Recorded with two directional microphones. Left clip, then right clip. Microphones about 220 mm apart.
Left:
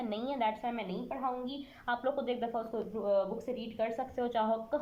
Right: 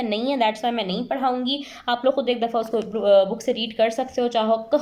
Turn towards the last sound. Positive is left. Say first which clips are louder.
# right 12 dB
turn(degrees=-15)  # may be behind; listen again after turning